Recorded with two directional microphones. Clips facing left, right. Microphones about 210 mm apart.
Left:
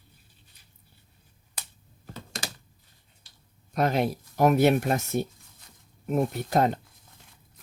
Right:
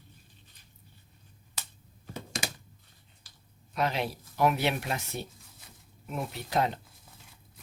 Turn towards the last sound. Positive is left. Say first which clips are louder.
# left 5 dB
turn(degrees=45)  # may be behind; listen again after turning